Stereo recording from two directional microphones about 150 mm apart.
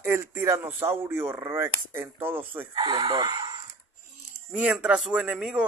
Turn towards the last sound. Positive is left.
turn(degrees=-5)  # may be behind; listen again after turning